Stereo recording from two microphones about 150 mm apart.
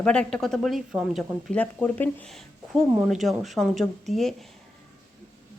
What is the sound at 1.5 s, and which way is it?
Speech, 10° left (ahead or behind).